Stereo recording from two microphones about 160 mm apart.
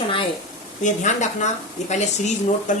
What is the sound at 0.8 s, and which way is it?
Speech, 50° left (ahead or behind).